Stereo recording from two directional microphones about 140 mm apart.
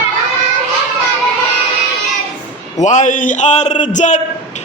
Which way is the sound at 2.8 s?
60° left (ahead or behind).